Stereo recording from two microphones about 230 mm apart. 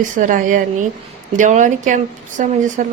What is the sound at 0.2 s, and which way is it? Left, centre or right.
Speech, right.